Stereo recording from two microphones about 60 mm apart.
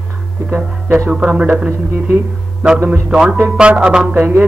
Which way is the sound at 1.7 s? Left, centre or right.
Right.